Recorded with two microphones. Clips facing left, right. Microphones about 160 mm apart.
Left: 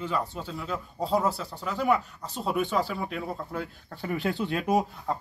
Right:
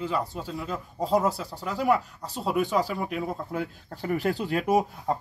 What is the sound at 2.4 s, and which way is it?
Speech, 5° right (ahead or behind).